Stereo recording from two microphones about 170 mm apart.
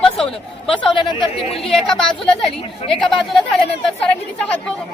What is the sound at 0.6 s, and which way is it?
Speech, 30° left (ahead or behind).